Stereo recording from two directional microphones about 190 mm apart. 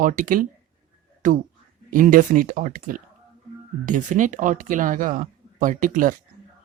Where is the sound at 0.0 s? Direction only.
45° right (ahead or behind).